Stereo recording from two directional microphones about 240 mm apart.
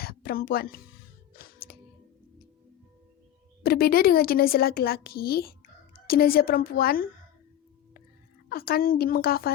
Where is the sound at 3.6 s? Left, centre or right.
Left.